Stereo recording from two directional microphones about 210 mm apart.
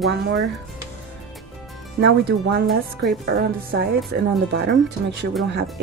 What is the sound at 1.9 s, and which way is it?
Speech, 55° right (ahead or behind).